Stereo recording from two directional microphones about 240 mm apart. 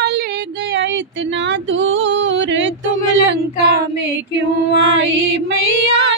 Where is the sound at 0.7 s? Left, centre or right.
Right.